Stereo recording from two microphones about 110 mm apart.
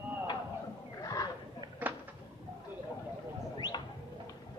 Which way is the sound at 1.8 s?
15° right (ahead or behind).